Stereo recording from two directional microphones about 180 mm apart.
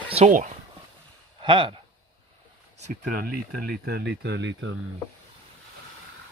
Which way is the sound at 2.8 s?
50° right (ahead or behind).